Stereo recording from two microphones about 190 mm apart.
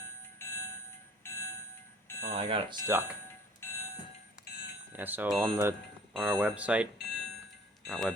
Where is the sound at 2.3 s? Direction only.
30° right (ahead or behind).